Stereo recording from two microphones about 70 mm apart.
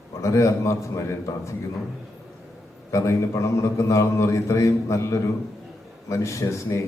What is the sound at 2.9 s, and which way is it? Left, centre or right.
A man's voice, left.